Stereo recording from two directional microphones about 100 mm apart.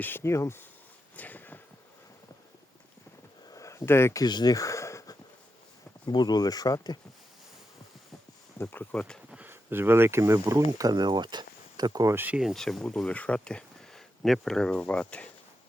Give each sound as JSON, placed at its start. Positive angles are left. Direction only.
{"t": 0.0, "sound": "speech", "side_deg": 25}
{"t": 1.1, "sound": "a sound", "side_deg": 15}
{"t": 3.5, "sound": "a sound", "side_deg": 30}
{"t": 4.2, "sound": "speech", "side_deg": 45}
{"t": 4.5, "sound": "a sound", "side_deg": 30}
{"t": 6.1, "sound": "speech", "side_deg": 45}
{"t": 8.5, "sound": "speech", "side_deg": 25}
{"t": 9.3, "sound": "speech", "side_deg": -20}
{"t": 12.0, "sound": "speech", "side_deg": -20}
{"t": 12.4, "sound": "speech", "side_deg": 0}